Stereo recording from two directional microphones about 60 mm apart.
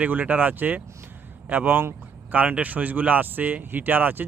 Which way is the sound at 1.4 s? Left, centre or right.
Right.